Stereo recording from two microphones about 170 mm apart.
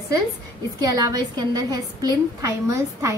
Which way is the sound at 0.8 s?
25° right (ahead or behind).